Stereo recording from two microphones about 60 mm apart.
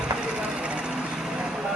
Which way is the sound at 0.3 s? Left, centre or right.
Centre.